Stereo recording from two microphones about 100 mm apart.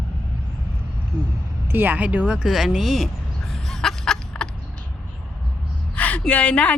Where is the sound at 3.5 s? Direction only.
5° left (ahead or behind).